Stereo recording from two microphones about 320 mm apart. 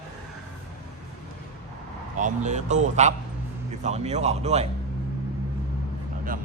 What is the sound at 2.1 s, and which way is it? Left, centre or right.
Speech, right.